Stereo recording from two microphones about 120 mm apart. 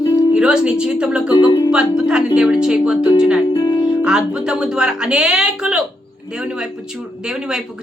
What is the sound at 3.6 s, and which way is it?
Music, 30° left (ahead or behind).